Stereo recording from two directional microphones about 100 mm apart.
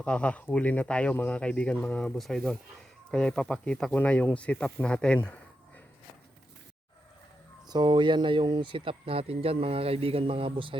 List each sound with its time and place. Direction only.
0.0 s speech: 10° left (ahead or behind)
7.7 s speech: 50° right (ahead or behind)